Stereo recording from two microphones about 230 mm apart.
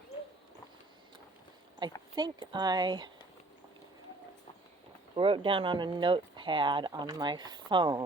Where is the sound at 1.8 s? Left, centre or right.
Centre.